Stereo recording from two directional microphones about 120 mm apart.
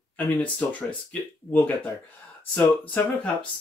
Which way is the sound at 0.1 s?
10° left (ahead or behind).